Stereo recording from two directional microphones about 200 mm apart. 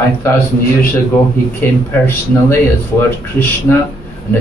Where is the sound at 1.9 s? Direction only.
10° left (ahead or behind).